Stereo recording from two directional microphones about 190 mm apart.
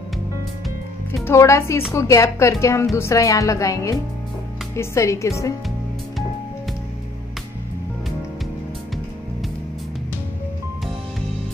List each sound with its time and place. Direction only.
1.2 s a woman's voice: 15° left (ahead or behind)